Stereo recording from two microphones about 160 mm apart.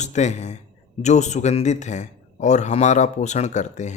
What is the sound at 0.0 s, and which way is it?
Speech, 45° left (ahead or behind).